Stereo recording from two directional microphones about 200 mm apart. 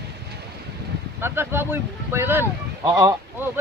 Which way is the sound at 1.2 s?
10° right (ahead or behind).